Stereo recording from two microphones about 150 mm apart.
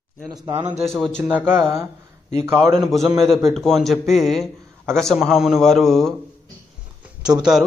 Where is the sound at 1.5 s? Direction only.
15° right (ahead or behind).